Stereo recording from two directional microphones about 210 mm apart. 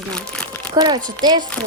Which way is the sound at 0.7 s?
20° right (ahead or behind).